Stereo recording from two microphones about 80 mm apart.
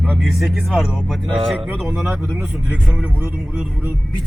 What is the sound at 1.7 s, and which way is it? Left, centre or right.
Speech, centre.